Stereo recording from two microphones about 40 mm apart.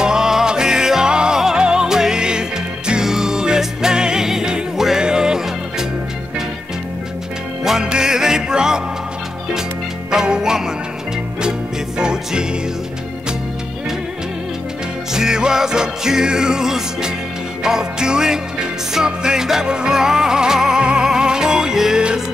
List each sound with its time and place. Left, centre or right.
0.0 s music: centre
7.8 s music: centre
10.1 s music: centre
12.0 s music: centre
15.1 s music: centre